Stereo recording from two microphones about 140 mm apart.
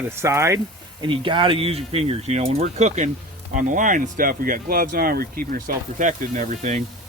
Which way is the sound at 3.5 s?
70° right (ahead or behind).